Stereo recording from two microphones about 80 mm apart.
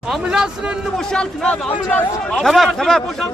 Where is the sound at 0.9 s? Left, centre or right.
Centre.